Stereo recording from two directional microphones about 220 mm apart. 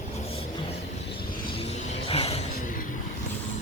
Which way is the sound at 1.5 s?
30° left (ahead or behind).